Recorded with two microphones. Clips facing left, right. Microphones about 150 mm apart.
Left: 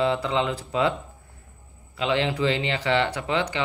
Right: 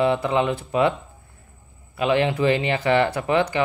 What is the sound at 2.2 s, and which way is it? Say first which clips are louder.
Speech: right 4 dB; 25° right (ahead or behind).